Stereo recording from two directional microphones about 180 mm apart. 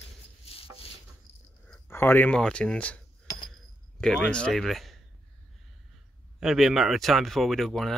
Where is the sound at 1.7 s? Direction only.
10° left (ahead or behind).